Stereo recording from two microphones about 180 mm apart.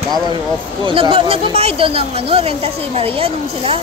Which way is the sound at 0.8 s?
30° right (ahead or behind).